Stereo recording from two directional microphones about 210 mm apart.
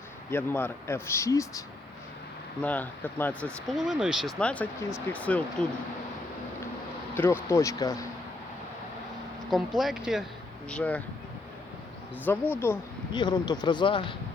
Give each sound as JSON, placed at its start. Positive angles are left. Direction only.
{"t": 0.3, "sound": "speech", "side_deg": 10}
{"t": 7.2, "sound": "speech", "side_deg": 10}
{"t": 9.5, "sound": "speech", "side_deg": 0}
{"t": 12.2, "sound": "speech", "side_deg": 10}